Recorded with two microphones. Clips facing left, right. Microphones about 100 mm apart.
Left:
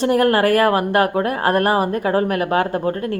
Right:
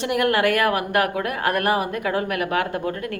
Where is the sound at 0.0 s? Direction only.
35° left (ahead or behind).